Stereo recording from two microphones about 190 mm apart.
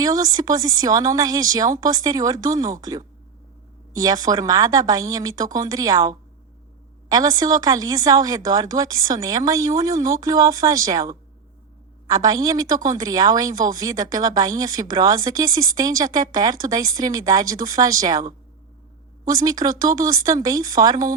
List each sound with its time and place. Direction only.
0.0 s a woman's voice: 20° right (ahead or behind)